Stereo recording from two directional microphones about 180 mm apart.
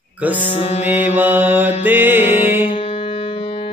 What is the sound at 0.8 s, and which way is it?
Music, 10° right (ahead or behind).